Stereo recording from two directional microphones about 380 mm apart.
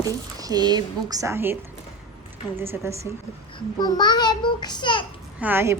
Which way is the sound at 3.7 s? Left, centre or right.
Centre.